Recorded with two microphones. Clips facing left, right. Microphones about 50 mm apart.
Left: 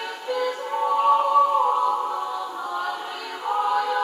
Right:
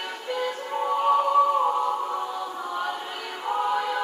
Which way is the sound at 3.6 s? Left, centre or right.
Centre.